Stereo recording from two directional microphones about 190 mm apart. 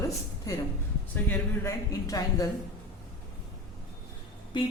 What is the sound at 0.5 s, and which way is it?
A woman's voice, 15° left (ahead or behind).